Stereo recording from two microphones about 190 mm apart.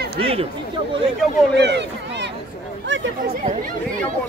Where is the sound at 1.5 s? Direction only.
65° right (ahead or behind).